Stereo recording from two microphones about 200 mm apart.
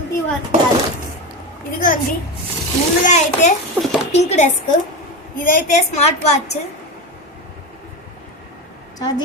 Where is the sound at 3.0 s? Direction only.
35° left (ahead or behind).